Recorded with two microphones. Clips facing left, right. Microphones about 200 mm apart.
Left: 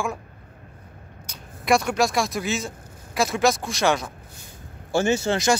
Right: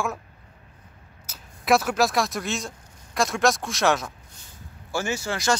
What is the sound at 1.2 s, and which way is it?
Speech, 5° right (ahead or behind).